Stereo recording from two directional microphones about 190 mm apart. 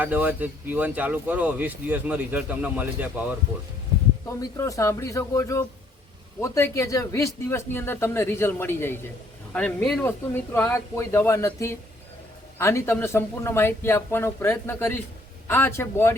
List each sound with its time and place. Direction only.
0.0 s speech: 10° right (ahead or behind)
4.4 s speech: 15° left (ahead or behind)